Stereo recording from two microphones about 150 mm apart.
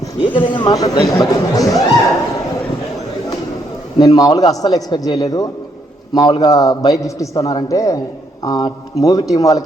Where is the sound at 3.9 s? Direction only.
25° left (ahead or behind).